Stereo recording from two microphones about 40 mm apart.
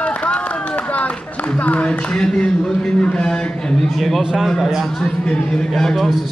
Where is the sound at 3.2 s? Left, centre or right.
Left.